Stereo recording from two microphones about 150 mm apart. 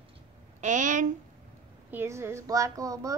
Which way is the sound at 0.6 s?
55° right (ahead or behind).